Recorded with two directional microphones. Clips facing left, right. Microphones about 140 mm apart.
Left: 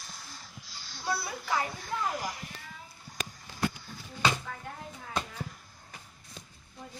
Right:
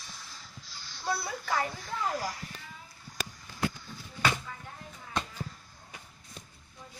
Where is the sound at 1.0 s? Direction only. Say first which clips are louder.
Even; 5° left (ahead or behind).